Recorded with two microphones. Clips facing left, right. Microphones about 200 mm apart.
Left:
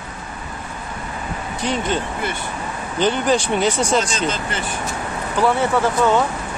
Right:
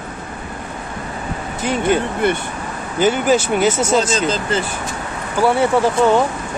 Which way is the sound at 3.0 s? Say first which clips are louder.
Right 3 dB; 5° right (ahead or behind).